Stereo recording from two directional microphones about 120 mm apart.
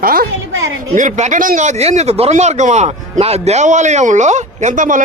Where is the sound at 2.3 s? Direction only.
75° right (ahead or behind).